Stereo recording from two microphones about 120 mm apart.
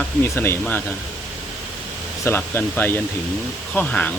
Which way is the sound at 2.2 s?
20° left (ahead or behind).